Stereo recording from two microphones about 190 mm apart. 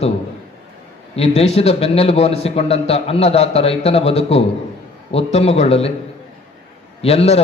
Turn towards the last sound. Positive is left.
turn(degrees=35)  # may be behind; listen again after turning